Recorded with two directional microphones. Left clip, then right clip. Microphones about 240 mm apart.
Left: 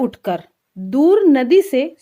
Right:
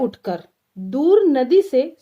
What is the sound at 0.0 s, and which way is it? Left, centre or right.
Speech, left.